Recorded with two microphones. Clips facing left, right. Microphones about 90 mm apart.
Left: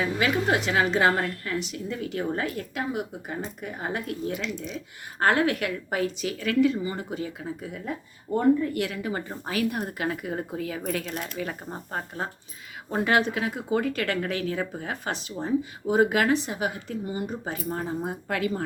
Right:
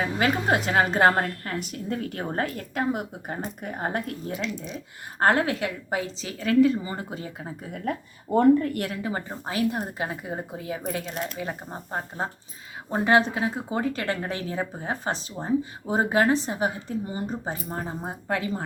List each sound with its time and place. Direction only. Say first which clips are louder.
0.0 s a woman's voice: even; 40° right (ahead or behind)
7.9 s speech: right 4 dB; 80° right
8.7 s a woman's voice: left 1 dB; 45° right (ahead or behind)
9.0 s speech: even; 30° right (ahead or behind)